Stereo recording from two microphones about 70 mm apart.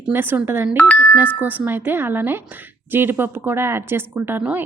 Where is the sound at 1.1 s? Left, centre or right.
Right.